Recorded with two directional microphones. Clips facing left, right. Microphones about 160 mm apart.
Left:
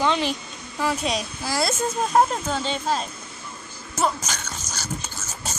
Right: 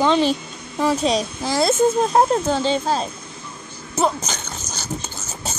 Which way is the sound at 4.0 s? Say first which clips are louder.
Right 4 dB; 30° right (ahead or behind).